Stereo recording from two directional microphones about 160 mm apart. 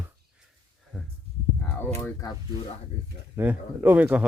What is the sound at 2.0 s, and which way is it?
Speech, 15° left (ahead or behind).